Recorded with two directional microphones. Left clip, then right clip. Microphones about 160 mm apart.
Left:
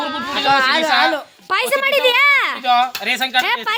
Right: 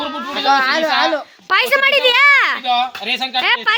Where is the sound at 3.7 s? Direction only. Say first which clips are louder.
Right 5 dB; 10° left (ahead or behind).